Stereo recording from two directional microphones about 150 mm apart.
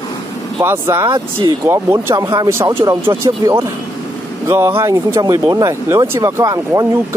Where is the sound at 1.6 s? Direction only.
20° right (ahead or behind).